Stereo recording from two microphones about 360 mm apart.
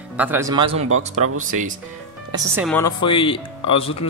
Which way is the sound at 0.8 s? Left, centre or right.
Right.